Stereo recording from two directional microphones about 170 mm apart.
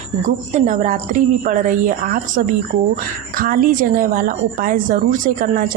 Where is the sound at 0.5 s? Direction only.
45° right (ahead or behind).